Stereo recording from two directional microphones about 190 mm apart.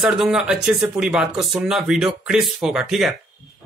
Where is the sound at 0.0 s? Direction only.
Centre (ahead or behind).